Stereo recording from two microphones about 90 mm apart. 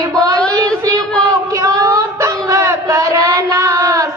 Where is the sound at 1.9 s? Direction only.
35° right (ahead or behind).